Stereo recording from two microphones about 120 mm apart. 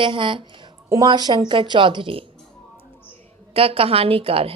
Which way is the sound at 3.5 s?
50° right (ahead or behind).